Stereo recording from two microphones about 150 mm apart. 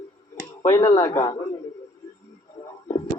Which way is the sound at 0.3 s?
20° left (ahead or behind).